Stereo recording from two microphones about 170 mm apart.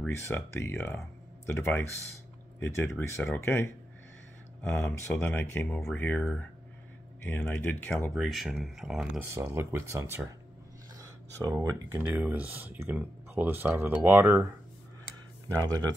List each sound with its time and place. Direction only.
0.0 s speech: 15° left (ahead or behind)
4.6 s speech: 10° left (ahead or behind)
8.1 s speech: centre (ahead or behind)
9.3 s speech: 15° right (ahead or behind)